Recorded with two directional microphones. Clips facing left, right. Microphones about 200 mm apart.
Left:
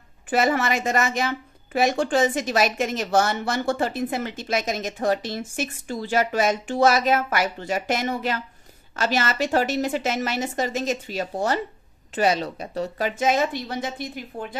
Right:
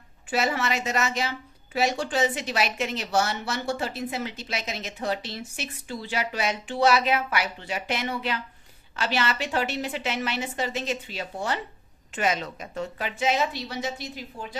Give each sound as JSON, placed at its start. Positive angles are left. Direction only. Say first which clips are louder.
{"t": 0.3, "sound": "a woman's voice", "louder": "left 5 dB", "side_deg": 50}